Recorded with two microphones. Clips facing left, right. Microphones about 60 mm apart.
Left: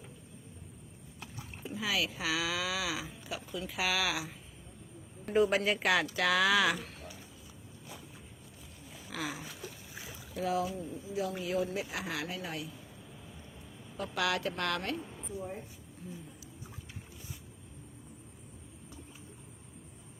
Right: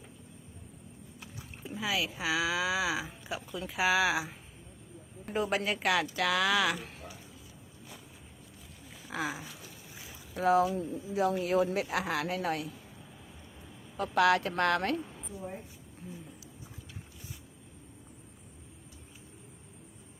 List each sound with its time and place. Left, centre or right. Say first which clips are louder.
1.6 s speech: right 1 dB; centre
3.2 s a woman's voice: right 1 dB; right
5.2 s speech: left 3 dB; centre
9.1 s a sound: right 4 dB; centre
10.3 s speech: right 7 dB; right
13.9 s speech: right 7 dB; right